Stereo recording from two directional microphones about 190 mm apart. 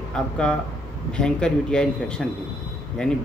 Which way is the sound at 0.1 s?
5° left (ahead or behind).